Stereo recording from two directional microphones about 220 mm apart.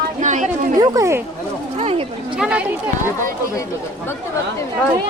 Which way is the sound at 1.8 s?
30° right (ahead or behind).